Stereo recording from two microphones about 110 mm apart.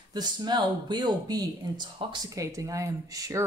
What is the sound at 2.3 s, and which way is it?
Speech, 30° right (ahead or behind).